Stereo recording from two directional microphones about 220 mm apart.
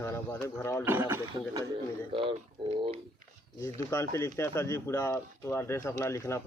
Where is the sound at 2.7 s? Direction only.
25° right (ahead or behind).